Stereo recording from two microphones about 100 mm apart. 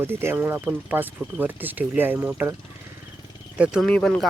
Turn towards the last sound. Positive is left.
turn(degrees=10)  # may be behind; listen again after turning